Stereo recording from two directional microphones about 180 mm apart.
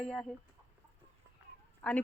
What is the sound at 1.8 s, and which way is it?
Speech, 10° left (ahead or behind).